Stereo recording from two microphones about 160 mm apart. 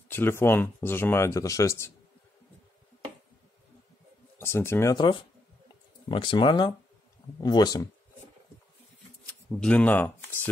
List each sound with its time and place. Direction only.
0.1 s speech: 15° left (ahead or behind)
4.4 s speech: 15° left (ahead or behind)
9.2 s speech: 10° left (ahead or behind)